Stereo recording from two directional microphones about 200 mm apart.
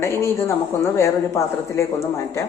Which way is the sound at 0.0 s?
15° left (ahead or behind).